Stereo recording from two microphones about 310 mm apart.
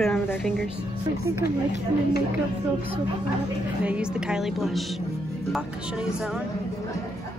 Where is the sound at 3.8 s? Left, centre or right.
Centre.